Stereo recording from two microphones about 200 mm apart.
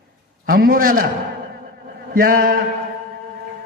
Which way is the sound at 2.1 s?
45° right (ahead or behind).